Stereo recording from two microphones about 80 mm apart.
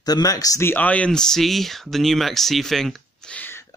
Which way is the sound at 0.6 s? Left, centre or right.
Left.